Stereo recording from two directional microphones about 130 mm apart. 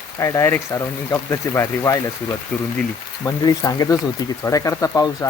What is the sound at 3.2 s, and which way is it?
Speech, 30° left (ahead or behind).